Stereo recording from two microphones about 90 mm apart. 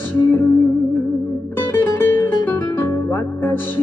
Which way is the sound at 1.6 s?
25° left (ahead or behind).